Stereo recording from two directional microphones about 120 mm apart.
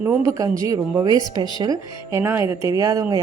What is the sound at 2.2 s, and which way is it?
Speech, 20° right (ahead or behind).